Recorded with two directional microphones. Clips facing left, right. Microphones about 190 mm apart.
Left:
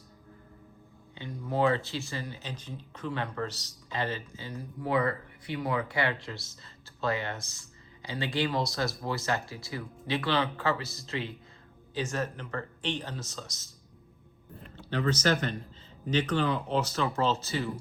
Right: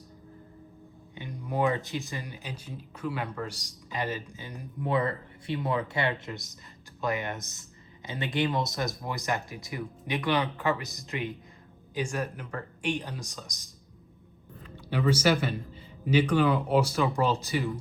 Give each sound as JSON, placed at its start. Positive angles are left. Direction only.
{"t": 1.1, "sound": "speech", "side_deg": -15}
{"t": 14.8, "sound": "speech", "side_deg": -10}